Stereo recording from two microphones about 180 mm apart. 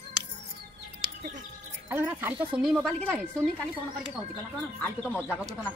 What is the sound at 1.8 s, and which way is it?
Speech, 10° right (ahead or behind).